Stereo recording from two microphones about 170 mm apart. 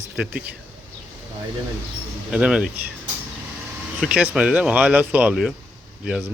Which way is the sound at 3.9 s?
5° right (ahead or behind).